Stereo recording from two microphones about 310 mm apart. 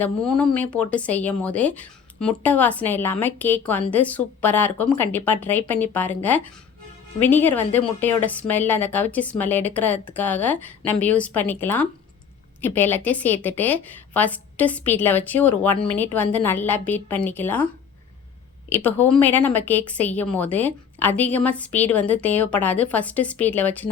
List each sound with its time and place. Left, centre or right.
0.0 s speech: centre
7.4 s speech: centre
18.7 s speech: centre